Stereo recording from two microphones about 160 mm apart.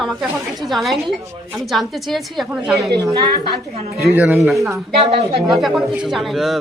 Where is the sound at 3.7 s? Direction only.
40° right (ahead or behind).